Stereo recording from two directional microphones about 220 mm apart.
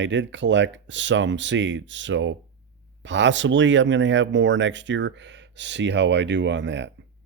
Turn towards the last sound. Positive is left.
turn(degrees=-55)  # may be behind; listen again after turning